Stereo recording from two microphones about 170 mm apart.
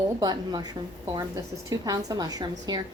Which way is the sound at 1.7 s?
20° right (ahead or behind).